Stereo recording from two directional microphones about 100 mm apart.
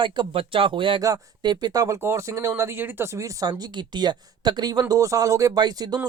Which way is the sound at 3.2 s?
35° right (ahead or behind).